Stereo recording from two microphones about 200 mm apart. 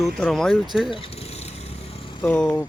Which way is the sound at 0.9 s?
30° left (ahead or behind).